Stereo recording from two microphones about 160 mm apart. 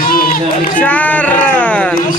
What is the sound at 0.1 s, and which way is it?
Run, 65° left (ahead or behind).